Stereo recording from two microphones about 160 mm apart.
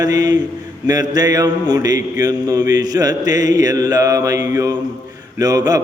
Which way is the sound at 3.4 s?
50° left (ahead or behind).